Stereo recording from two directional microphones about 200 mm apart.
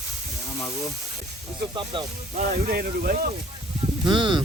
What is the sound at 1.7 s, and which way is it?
Speech, 25° right (ahead or behind).